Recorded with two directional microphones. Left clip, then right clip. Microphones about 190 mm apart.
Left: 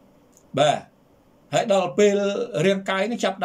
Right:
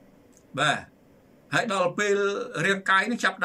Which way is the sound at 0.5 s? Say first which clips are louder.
Left 5 dB; 15° left (ahead or behind).